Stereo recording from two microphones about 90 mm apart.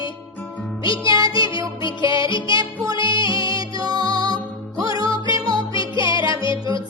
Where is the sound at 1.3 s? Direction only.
65° left (ahead or behind).